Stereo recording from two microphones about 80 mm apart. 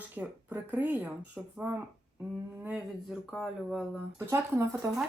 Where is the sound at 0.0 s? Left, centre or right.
Centre.